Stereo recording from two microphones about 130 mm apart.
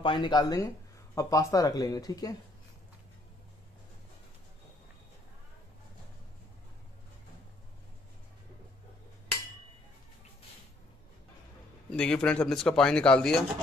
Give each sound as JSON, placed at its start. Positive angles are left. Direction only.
{"t": 0.0, "sound": "speech", "side_deg": 40}
{"t": 11.9, "sound": "speech", "side_deg": 10}